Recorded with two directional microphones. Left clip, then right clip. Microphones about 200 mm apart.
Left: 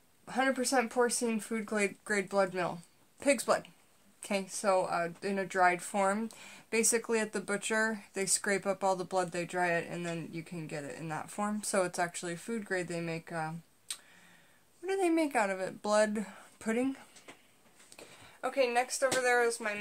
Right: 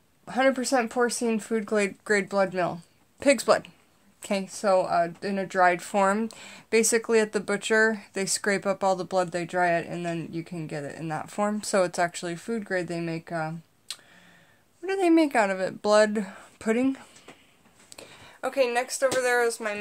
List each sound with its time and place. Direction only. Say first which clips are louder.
0.2 s speech: right 7 dB; 30° right (ahead or behind)